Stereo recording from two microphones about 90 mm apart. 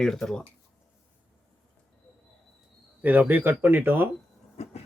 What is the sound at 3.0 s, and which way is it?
Speech, 20° right (ahead or behind).